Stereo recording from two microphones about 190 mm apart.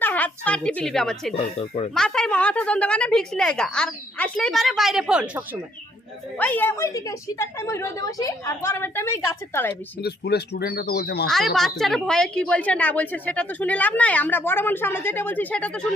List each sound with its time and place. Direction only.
0.0 s a woman's voice: 10° left (ahead or behind)
1.3 s speech: 30° left (ahead or behind)
2.0 s a woman's voice: 5° left (ahead or behind)
6.3 s a woman's voice: 10° left (ahead or behind)
10.0 s speech: 60° left (ahead or behind)
11.3 s a woman's voice: centre (ahead or behind)